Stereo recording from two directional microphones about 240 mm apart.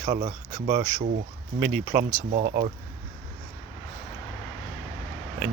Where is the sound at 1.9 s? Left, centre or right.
Right.